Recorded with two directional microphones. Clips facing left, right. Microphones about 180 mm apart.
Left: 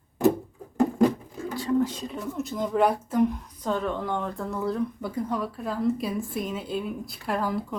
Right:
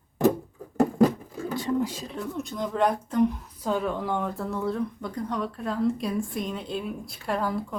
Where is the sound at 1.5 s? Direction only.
20° right (ahead or behind).